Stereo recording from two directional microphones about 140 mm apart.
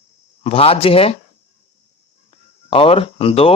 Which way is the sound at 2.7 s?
40° left (ahead or behind).